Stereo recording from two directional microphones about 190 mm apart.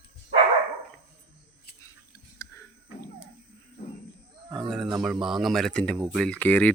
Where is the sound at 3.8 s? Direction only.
55° left (ahead or behind).